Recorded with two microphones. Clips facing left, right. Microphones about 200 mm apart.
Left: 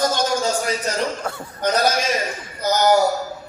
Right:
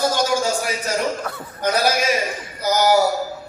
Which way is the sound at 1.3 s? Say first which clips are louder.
Left 2 dB; 30° left (ahead or behind).